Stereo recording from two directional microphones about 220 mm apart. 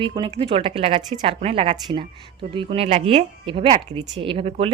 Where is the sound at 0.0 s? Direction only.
20° right (ahead or behind).